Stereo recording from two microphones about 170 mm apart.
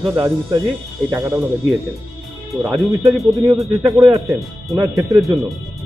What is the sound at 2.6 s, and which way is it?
Speech, centre (ahead or behind).